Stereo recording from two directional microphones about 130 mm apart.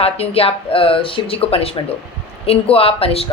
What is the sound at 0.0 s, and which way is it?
A woman's voice, 50° left (ahead or behind).